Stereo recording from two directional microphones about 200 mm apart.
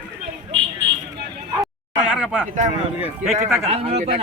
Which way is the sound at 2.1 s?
5° right (ahead or behind).